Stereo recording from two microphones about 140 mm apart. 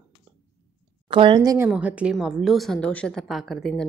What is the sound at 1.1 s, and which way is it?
Speech, 35° right (ahead or behind).